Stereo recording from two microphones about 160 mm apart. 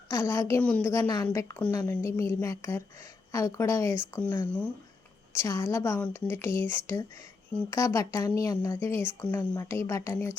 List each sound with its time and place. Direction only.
0.1 s a woman's voice: 15° left (ahead or behind)